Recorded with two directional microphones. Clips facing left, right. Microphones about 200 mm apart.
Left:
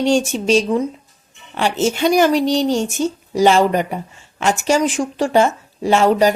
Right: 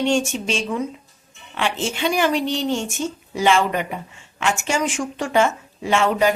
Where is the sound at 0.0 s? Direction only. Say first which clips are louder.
Left 4 dB; 35° left (ahead or behind).